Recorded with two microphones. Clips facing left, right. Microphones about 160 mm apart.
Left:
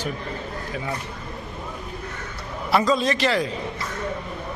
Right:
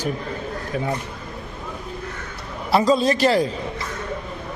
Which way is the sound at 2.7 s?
30° right (ahead or behind).